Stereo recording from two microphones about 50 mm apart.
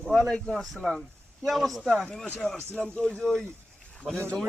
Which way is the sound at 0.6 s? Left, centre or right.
Centre.